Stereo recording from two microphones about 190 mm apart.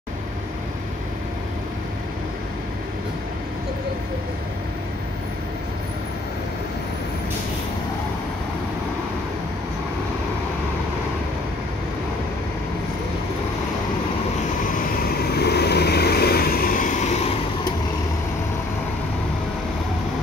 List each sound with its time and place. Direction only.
14.8 s vehicle: 55° left (ahead or behind); by 17.3 s 35° left (ahead or behind)